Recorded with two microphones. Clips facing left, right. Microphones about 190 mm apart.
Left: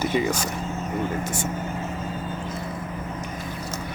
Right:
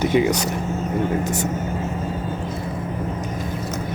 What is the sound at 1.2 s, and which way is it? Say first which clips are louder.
Speech: right 5 dB; 40° right (ahead or behind).